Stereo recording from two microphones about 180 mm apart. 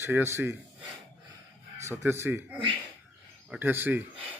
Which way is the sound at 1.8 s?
15° right (ahead or behind).